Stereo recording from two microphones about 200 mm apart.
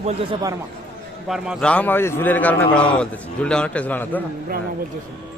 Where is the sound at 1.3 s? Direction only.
Centre (ahead or behind).